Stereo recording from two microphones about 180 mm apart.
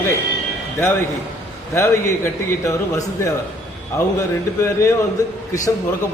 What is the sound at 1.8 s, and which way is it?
A man's voice, 15° left (ahead or behind).